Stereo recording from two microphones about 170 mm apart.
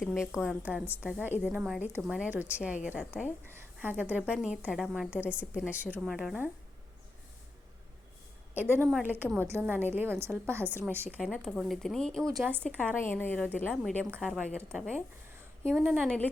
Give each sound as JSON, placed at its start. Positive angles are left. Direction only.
{"t": 0.0, "sound": "a woman's voice", "side_deg": 0}
{"t": 8.5, "sound": "a woman's voice", "side_deg": -10}
{"t": 11.3, "sound": "a woman's voice", "side_deg": 0}
{"t": 12.4, "sound": "a woman's voice", "side_deg": -10}
{"t": 12.6, "sound": "a woman's voice", "side_deg": 10}
{"t": 16.0, "sound": "a woman's voice", "side_deg": 5}